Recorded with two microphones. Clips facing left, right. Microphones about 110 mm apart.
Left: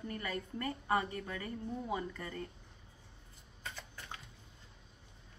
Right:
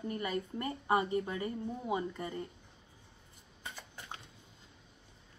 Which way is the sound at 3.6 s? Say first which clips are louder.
Even; 15° right (ahead or behind).